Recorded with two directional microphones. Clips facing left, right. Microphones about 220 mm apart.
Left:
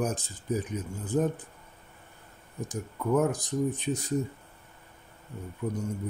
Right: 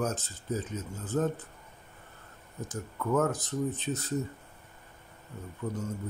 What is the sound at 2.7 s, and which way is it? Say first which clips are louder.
Speech: left 3 dB; 15° left (ahead or behind).